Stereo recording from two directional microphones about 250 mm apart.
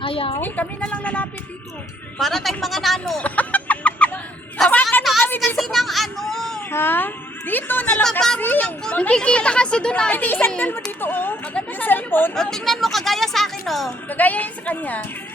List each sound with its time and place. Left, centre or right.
0.0 s a woman's voice: left
0.3 s a woman's voice: centre